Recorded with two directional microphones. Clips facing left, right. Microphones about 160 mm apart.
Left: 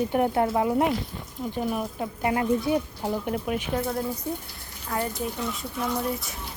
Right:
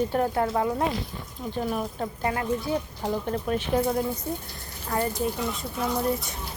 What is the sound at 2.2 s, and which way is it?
Speech, 20° left (ahead or behind).